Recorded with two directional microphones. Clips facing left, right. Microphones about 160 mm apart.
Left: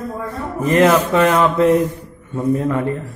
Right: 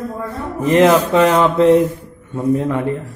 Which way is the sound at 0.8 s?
10° right (ahead or behind).